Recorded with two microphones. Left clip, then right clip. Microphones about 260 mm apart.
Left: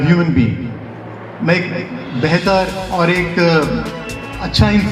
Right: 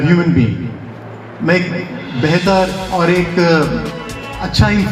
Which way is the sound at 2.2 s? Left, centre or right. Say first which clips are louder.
Right 1 dB; left.